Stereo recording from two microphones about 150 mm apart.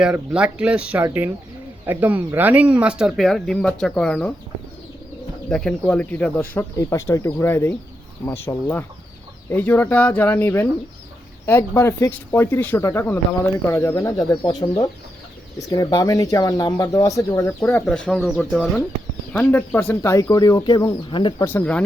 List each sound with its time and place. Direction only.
0.0 s speech: 5° right (ahead or behind)
5.5 s speech: 5° left (ahead or behind); by 21.4 s 30° left (ahead or behind)
21.4 s speech: 10° left (ahead or behind)